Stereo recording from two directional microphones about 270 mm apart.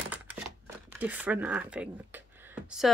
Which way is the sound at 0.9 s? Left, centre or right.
Centre.